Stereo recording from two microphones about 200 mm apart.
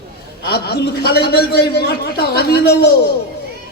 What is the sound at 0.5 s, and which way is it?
A man's voice, 55° left (ahead or behind).